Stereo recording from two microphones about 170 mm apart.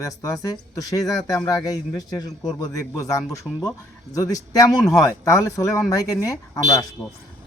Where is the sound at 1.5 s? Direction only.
20° left (ahead or behind).